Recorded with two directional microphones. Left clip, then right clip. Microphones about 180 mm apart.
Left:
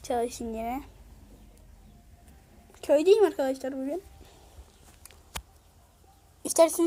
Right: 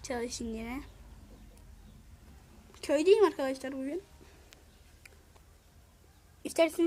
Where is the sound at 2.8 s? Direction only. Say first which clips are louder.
Left 4 dB; 5° right (ahead or behind).